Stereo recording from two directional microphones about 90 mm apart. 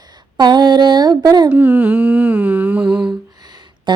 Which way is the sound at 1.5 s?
25° right (ahead or behind).